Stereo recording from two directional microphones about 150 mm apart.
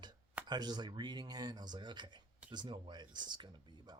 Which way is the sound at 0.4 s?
30° right (ahead or behind).